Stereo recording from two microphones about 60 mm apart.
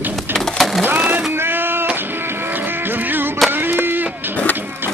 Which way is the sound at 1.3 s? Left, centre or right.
Right.